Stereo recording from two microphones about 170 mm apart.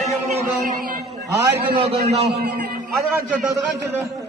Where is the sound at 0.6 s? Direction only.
50° right (ahead or behind).